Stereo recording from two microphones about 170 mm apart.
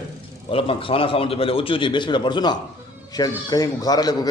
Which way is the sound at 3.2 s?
20° left (ahead or behind).